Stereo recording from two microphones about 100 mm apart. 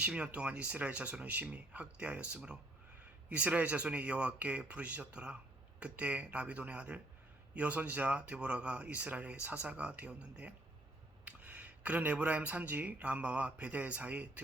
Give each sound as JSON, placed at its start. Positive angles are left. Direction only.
{"t": 0.0, "sound": "speech", "side_deg": -10}